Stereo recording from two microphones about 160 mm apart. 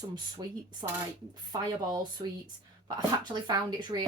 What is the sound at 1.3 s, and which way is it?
A woman's voice, 25° right (ahead or behind).